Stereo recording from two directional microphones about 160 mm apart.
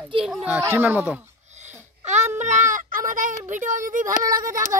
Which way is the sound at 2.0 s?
45° right (ahead or behind).